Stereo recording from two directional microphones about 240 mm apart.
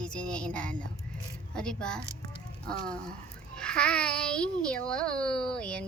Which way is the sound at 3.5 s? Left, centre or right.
Centre.